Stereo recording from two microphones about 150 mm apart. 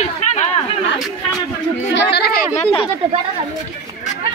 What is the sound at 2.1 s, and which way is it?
Speech, 90° left.